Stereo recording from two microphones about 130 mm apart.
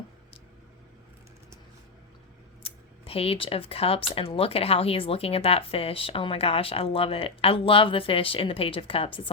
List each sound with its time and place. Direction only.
2.6 s speech: 50° left (ahead or behind)